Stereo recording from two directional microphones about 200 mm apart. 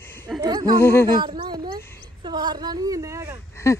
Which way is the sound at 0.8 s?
10° left (ahead or behind).